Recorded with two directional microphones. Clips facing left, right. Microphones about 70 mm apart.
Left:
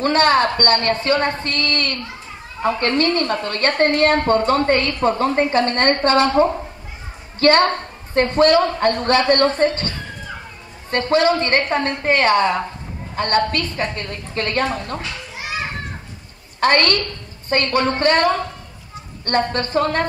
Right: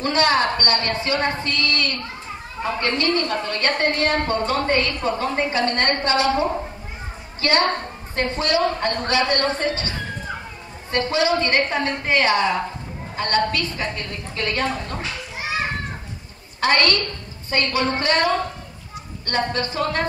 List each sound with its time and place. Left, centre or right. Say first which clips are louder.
0.0 s a woman's voice: left 4 dB; left
2.6 s speech: left 6 dB; right
3.0 s a woman's voice: left 3 dB; left
16.5 s a woman's voice: left 3 dB; left